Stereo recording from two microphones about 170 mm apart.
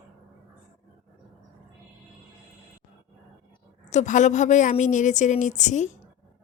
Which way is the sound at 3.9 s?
45° left (ahead or behind).